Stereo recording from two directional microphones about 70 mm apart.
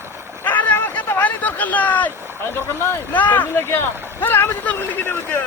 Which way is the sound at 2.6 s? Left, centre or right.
Left.